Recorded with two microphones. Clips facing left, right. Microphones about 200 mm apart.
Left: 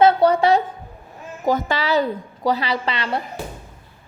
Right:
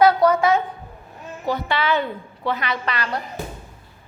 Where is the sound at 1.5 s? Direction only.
45° left (ahead or behind); by 3.2 s 25° left (ahead or behind).